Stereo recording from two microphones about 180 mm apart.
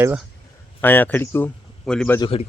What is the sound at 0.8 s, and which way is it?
A man's voice, 10° left (ahead or behind).